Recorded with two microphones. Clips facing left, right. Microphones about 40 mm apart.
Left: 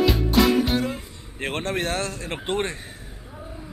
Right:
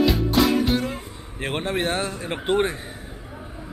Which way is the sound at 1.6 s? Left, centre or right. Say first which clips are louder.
Right 2 dB; centre.